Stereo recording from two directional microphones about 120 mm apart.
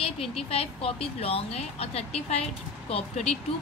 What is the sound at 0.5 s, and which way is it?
Speech, 55° left (ahead or behind).